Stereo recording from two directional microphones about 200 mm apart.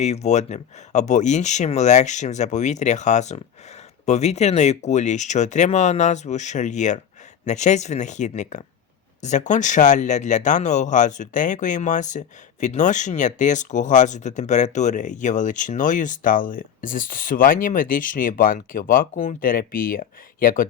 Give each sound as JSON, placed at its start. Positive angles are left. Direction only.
{"t": 0.0, "sound": "speech", "side_deg": 35}